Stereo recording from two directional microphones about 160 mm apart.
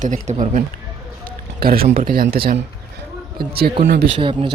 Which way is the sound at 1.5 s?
70° right (ahead or behind).